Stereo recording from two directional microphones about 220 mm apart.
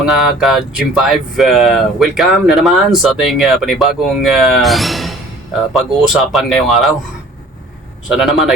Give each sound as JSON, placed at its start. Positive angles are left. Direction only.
{"t": 0.0, "sound": "speech", "side_deg": 0}
{"t": 8.0, "sound": "speech", "side_deg": 0}